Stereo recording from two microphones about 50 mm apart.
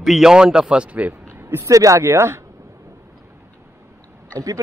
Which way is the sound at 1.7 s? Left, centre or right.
Right.